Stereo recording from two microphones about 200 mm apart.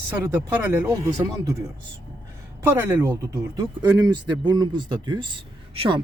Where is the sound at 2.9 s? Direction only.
15° right (ahead or behind).